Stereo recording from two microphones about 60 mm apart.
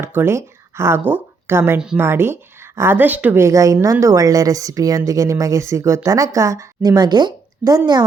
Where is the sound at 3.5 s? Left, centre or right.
Right.